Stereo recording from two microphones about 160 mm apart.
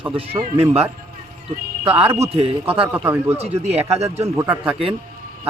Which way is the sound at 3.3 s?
40° right (ahead or behind).